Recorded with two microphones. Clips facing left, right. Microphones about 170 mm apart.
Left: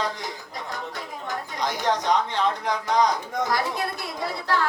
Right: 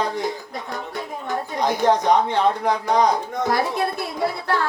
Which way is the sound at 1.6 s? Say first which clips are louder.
Right 7 dB; 55° right (ahead or behind).